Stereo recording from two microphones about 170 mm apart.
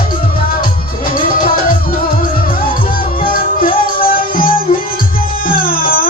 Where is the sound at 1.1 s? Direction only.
55° left (ahead or behind).